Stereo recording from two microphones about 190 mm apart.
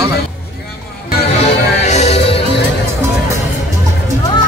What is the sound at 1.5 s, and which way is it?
Music, 35° left (ahead or behind).